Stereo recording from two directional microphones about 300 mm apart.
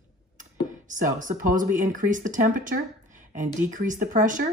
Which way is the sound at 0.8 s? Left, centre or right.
Right.